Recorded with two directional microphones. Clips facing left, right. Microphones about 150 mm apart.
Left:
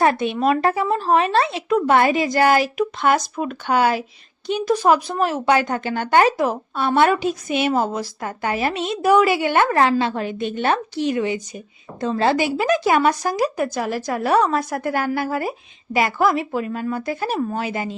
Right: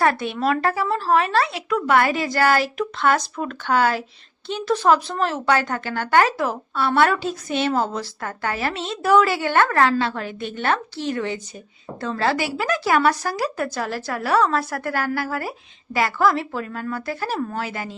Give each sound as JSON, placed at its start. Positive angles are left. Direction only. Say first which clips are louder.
{"t": 0.0, "sound": "a woman's voice", "louder": "left 3 dB", "side_deg": 20}